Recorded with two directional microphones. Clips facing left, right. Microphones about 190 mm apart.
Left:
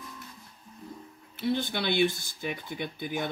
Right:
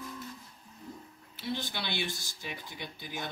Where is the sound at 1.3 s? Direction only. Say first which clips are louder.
Left 7 dB; 55° left (ahead or behind).